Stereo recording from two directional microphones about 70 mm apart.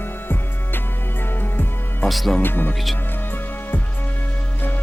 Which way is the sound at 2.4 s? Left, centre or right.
Left.